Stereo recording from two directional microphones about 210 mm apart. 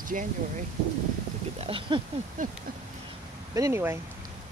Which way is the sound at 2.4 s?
40° right (ahead or behind).